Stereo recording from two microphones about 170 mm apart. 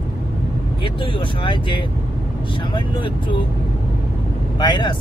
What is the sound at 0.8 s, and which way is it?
Speech, 30° left (ahead or behind).